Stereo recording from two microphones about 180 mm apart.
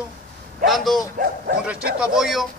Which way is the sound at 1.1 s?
60° right (ahead or behind).